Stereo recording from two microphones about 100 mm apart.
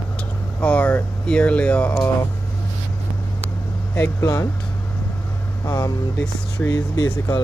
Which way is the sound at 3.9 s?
25° left (ahead or behind).